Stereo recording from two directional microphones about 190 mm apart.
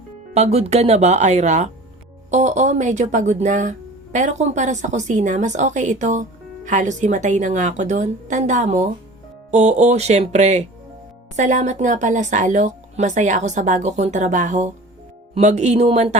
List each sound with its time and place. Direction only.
0.3 s speech: 35° right (ahead or behind)